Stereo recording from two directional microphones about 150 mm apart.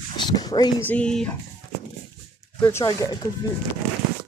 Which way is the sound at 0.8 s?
10° left (ahead or behind).